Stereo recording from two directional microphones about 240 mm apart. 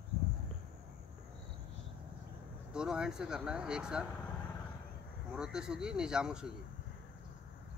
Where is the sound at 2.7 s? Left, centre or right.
Centre.